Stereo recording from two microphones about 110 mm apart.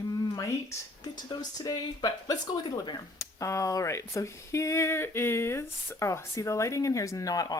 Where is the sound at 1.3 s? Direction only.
40° left (ahead or behind).